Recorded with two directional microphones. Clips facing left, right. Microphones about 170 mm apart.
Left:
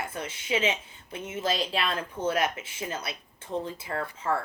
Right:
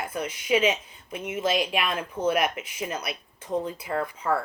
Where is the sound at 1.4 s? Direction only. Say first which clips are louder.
Right 3 dB; 15° right (ahead or behind).